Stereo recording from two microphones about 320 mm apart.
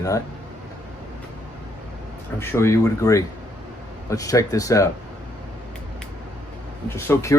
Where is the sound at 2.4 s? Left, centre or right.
Centre.